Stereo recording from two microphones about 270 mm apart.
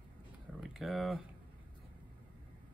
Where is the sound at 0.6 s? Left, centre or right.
Centre.